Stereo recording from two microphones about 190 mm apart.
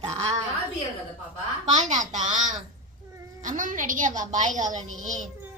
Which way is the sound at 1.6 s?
40° right (ahead or behind).